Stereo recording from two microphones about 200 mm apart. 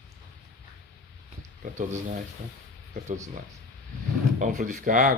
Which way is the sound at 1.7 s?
35° right (ahead or behind).